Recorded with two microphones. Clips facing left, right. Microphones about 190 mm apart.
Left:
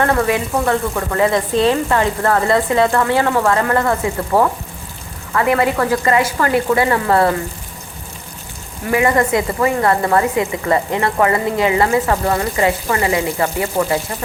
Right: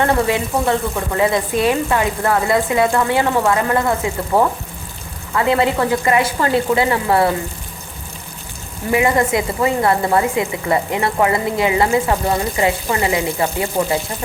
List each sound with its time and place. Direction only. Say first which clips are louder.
0.0 s speech: even; 20° right (ahead or behind)
5.3 s speech: even; 20° right (ahead or behind)
6.9 s speech: left 1 dB; 10° right (ahead or behind)
8.9 s speech: left 1 dB; 20° right (ahead or behind)